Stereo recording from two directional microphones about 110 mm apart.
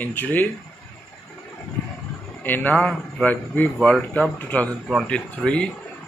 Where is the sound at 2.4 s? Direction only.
15° left (ahead or behind).